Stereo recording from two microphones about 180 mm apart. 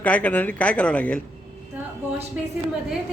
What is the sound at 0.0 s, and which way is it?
Speech, 10° left (ahead or behind).